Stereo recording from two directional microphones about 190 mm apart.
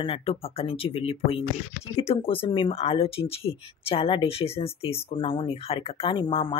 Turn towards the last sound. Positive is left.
turn(degrees=25)  # may be behind; listen again after turning